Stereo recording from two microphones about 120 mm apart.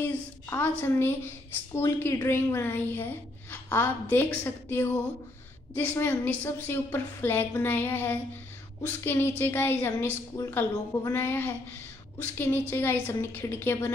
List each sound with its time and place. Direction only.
0.0 s a woman's voice: 15° left (ahead or behind)